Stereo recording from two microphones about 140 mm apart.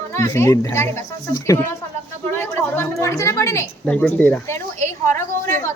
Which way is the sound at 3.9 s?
10° left (ahead or behind).